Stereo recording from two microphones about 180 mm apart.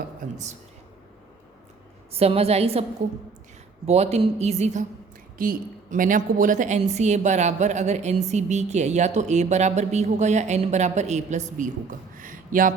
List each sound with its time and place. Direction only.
0.2 s a woman's voice: 40° right (ahead or behind)
2.1 s a woman's voice: 35° right (ahead or behind)
3.8 s a woman's voice: 35° right (ahead or behind)
12.2 s a sound: 50° right (ahead or behind)